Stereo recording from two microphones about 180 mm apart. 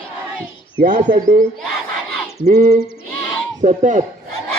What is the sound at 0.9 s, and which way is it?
Speech, 50° right (ahead or behind).